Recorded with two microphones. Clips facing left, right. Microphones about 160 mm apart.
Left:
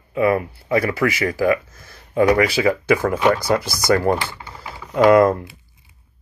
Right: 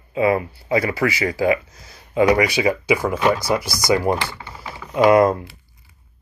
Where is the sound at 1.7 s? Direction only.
50° left (ahead or behind).